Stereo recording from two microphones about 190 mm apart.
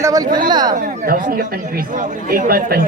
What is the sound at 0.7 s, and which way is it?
A man's voice, 45° right (ahead or behind).